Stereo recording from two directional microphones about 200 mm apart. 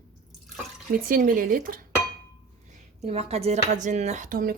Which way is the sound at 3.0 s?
30° right (ahead or behind).